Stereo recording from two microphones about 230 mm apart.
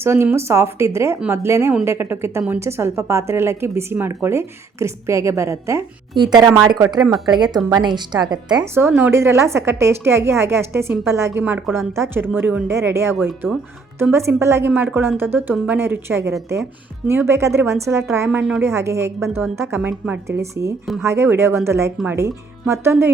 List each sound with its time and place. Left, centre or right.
0.0 s speech: centre